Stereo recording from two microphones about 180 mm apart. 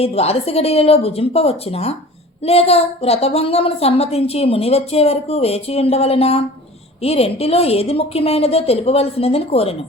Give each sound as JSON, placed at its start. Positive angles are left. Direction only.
{"t": 0.0, "sound": "a woman's voice", "side_deg": 35}